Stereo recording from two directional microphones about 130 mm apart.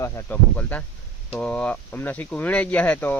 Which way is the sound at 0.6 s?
10° left (ahead or behind).